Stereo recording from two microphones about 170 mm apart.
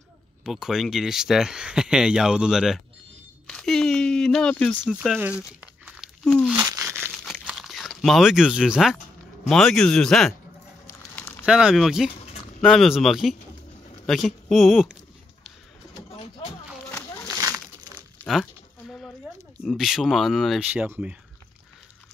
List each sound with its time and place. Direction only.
0.4 s speech: centre (ahead or behind)
4.9 s speech: 5° right (ahead or behind)
6.6 s crumpling: 15° right (ahead or behind)
7.4 s crunch: centre (ahead or behind)
9.4 s speech: centre (ahead or behind)
11.1 s a sound: 10° left (ahead or behind)
11.4 s speech: 5° right (ahead or behind)
17.3 s crumpling: 20° right (ahead or behind)
18.2 s a sound: centre (ahead or behind)
19.6 s speech: centre (ahead or behind)